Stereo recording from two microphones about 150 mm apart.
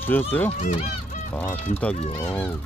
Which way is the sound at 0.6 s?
50° left (ahead or behind).